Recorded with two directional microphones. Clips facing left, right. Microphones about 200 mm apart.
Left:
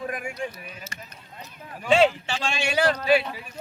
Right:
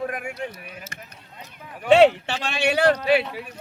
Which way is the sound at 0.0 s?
60° right (ahead or behind).